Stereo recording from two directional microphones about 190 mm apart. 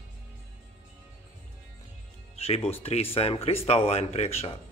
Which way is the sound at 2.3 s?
30° left (ahead or behind).